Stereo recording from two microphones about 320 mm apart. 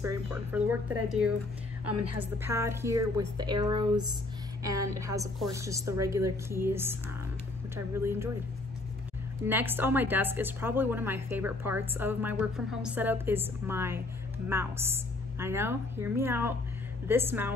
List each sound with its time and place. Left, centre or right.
0.3 s speech: centre
1.9 s a woman's voice: right
2.1 s a woman's voice: centre
9.5 s a woman's voice: centre